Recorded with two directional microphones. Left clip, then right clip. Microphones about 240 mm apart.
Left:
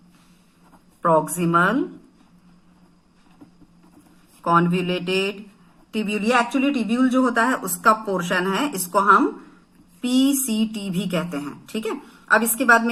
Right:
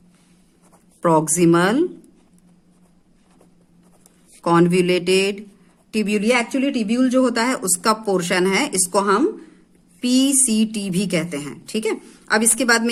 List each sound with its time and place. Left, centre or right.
1.0 s speech: right
4.4 s a woman's voice: right